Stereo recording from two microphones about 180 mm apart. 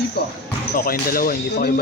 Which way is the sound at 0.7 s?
55° left (ahead or behind).